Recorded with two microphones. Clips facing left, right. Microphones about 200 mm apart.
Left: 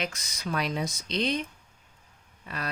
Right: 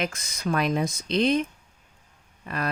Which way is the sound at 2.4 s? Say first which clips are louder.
Right 6 dB; 50° right (ahead or behind).